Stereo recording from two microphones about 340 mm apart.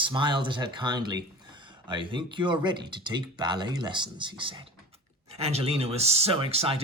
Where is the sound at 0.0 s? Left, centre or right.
Centre.